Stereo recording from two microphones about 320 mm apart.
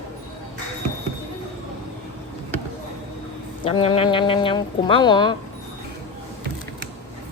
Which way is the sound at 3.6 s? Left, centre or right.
Centre.